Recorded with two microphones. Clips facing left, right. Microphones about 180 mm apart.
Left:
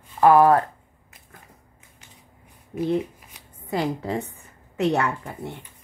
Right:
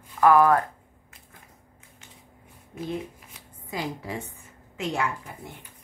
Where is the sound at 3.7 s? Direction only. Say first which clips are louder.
Left 7 dB; 65° left (ahead or behind).